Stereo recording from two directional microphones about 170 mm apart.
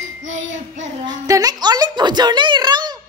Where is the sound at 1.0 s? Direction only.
20° right (ahead or behind).